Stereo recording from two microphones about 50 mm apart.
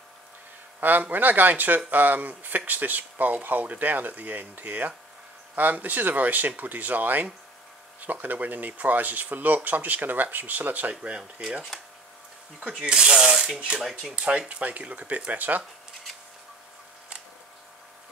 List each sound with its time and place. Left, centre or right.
0.7 s speech: right
11.0 s speech: centre
12.8 s rub: centre
13.7 s speech: centre
14.1 s speech: right